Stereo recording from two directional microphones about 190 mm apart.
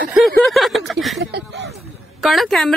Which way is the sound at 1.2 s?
70° right (ahead or behind).